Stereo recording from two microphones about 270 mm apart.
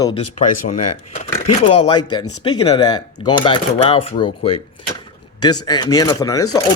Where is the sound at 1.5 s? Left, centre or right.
Left.